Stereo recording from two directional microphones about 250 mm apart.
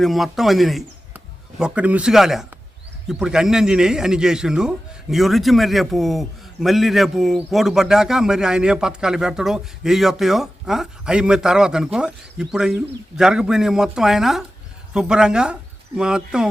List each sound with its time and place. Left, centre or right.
0.0 s a man's voice: centre